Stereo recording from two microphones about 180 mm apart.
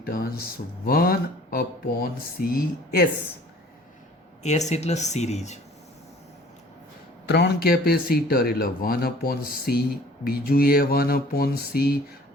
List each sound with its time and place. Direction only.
0.0 s speech: 55° left (ahead or behind)
4.4 s speech: 40° left (ahead or behind)
7.3 s speech: 65° left (ahead or behind)